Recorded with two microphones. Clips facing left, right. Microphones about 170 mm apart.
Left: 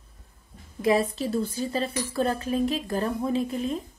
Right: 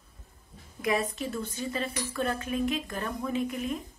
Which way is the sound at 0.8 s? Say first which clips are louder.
Left 6 dB; 30° left (ahead or behind).